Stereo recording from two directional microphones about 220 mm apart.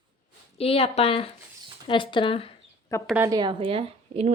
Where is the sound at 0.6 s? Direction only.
25° left (ahead or behind).